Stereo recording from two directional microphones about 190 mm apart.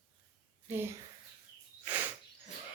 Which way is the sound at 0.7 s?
10° right (ahead or behind).